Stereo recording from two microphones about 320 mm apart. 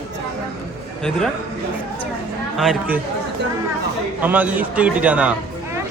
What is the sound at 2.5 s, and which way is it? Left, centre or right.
Speech, centre.